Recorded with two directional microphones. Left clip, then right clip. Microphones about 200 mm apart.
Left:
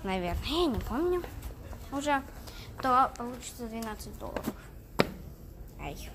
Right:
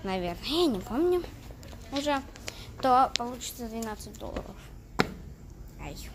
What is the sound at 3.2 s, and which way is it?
Speech, 5° right (ahead or behind).